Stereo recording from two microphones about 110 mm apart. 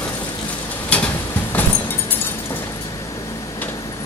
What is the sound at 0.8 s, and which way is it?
Vehicle, 10° left (ahead or behind).